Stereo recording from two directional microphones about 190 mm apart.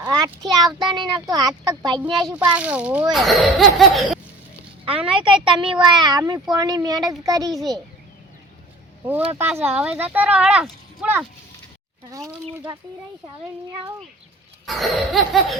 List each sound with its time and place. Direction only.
0.1 s a child's voice: 20° right (ahead or behind)
2.2 s a child's voice: 5° right (ahead or behind)
4.9 s a child's voice: 30° right (ahead or behind)
9.0 s a child's voice: 10° right (ahead or behind)
14.7 s a child's voice: centre (ahead or behind)